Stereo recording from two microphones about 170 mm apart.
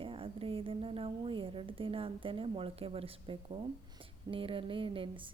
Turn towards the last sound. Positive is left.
turn(degrees=-30)  # may be behind; listen again after turning